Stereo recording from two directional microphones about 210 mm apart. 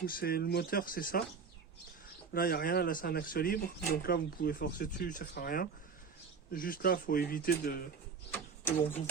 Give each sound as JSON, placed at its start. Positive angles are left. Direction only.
{"t": 0.0, "sound": "speech", "side_deg": 45}
{"t": 2.3, "sound": "speech", "side_deg": 45}
{"t": 8.3, "sound": "bird", "side_deg": 10}